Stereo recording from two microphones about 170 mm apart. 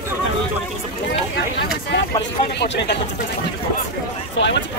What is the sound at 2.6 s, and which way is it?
Speech, 80° left.